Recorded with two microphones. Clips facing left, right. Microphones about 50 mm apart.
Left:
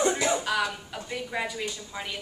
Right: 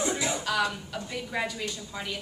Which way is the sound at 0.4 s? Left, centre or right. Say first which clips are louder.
Even; centre.